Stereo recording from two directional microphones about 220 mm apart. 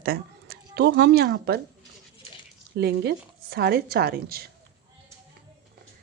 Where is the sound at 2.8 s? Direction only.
45° right (ahead or behind).